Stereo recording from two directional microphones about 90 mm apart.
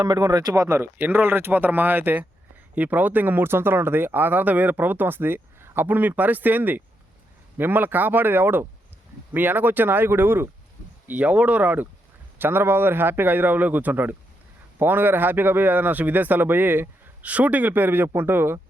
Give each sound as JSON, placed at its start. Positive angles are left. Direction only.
{"t": 0.0, "sound": "speech", "side_deg": -45}
{"t": 0.9, "sound": "speech", "side_deg": -20}